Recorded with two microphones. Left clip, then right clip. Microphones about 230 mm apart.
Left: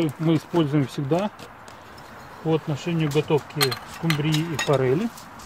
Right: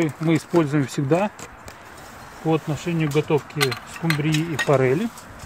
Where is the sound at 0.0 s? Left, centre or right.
Right.